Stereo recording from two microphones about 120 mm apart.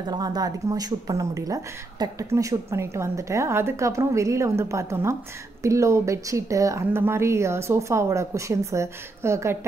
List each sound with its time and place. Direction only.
0.1 s speech: 35° right (ahead or behind)